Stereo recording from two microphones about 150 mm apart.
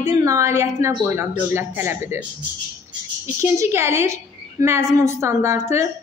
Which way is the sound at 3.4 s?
20° right (ahead or behind).